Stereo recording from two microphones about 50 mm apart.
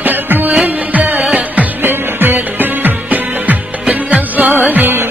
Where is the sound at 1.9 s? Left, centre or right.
Right.